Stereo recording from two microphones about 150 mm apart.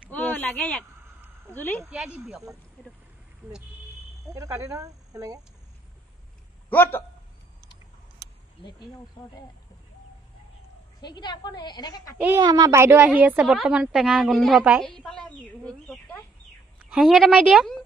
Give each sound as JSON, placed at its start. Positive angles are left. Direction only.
{"t": 0.1, "sound": "a sound", "side_deg": 10}
{"t": 1.5, "sound": "speech", "side_deg": 10}
{"t": 1.8, "sound": "speech", "side_deg": -5}
{"t": 4.3, "sound": "speech", "side_deg": -20}
{"t": 6.7, "sound": "speech", "side_deg": 15}
{"t": 8.2, "sound": "a sound", "side_deg": -90}
{"t": 11.0, "sound": "a woman's voice", "side_deg": 30}
{"t": 12.4, "sound": "a woman's voice", "side_deg": -25}